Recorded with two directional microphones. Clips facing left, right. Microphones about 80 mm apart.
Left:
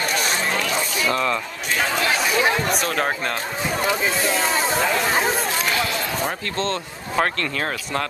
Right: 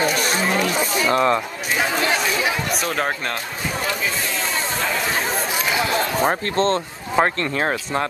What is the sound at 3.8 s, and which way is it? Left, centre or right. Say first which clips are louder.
Speech: left 3 dB; left.